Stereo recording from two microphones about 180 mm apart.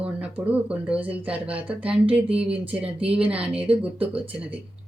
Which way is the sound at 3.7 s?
30° right (ahead or behind).